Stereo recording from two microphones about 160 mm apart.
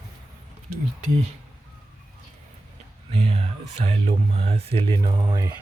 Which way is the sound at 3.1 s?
40° right (ahead or behind).